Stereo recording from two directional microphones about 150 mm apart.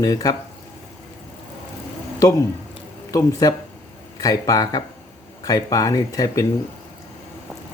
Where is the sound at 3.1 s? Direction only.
25° left (ahead or behind).